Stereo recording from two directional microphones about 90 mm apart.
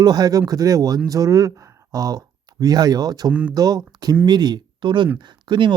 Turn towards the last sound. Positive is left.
turn(degrees=-60)  # may be behind; listen again after turning